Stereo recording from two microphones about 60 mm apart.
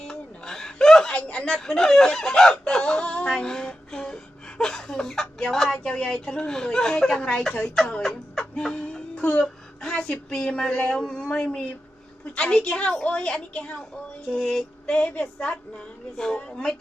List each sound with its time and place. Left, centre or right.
0.0 s a sound: centre
1.3 s speech: left
1.5 s speech: centre
8.5 s music: centre
9.4 s speech: centre